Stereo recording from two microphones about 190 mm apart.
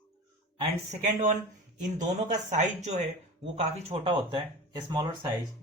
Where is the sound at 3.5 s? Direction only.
30° right (ahead or behind).